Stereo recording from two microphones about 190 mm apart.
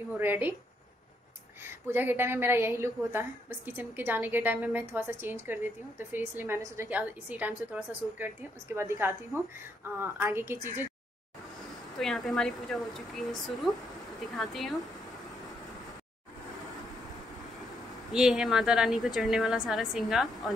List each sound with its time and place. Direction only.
0.2 s a woman's voice: 10° right (ahead or behind)
1.6 s a woman's voice: 10° right (ahead or behind)
8.7 s a woman's voice: 15° right (ahead or behind)
12.0 s a woman's voice: centre (ahead or behind)
18.1 s a woman's voice: 5° right (ahead or behind)